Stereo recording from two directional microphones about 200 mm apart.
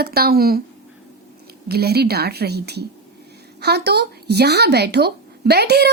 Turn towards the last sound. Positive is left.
turn(degrees=-55)  # may be behind; listen again after turning